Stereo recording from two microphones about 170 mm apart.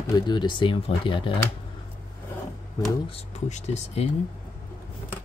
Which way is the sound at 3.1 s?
40° left (ahead or behind).